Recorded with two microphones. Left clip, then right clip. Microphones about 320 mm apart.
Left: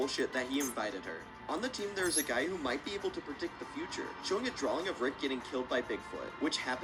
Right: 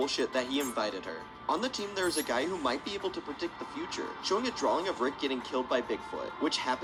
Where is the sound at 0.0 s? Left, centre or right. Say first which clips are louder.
Right 4 dB; centre.